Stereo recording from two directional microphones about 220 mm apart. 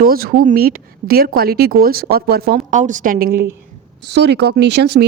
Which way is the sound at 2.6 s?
35° right (ahead or behind).